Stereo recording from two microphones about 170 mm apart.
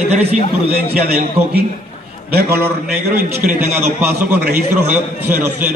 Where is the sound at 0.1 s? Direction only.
40° right (ahead or behind).